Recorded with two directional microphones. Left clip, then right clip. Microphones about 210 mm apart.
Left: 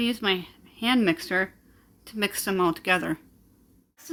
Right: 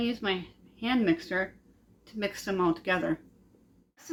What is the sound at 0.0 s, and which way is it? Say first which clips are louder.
Speech: left 5 dB; 40° left (ahead or behind).